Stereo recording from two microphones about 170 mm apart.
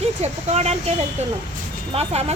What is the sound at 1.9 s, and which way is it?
Speech, 40° right (ahead or behind).